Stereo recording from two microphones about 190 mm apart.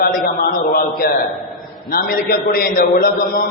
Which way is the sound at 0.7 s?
50° left (ahead or behind).